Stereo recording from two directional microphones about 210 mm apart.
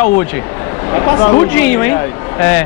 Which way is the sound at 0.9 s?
15° left (ahead or behind).